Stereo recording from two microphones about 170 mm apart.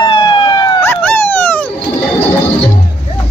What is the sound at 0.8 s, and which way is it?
Dog, 10° left (ahead or behind).